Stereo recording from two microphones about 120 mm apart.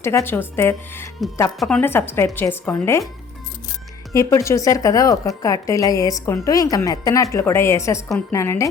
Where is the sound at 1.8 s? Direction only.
20° left (ahead or behind).